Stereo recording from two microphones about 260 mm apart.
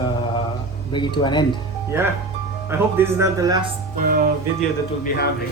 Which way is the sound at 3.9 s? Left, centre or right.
Right.